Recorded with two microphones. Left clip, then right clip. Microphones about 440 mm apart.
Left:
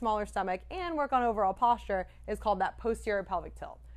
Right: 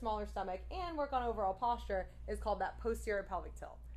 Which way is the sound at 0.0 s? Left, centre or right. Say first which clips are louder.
Left 8 dB; left.